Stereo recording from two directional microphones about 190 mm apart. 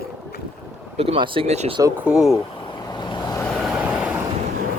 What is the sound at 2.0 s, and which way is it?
Speech, centre (ahead or behind).